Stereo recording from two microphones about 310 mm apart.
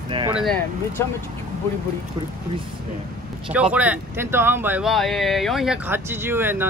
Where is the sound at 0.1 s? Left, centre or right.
Centre.